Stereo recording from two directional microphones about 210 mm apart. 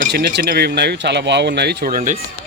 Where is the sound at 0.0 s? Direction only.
50° right (ahead or behind).